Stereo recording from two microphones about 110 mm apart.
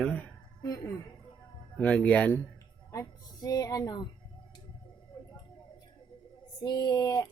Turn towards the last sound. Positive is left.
turn(degrees=30)  # may be behind; listen again after turning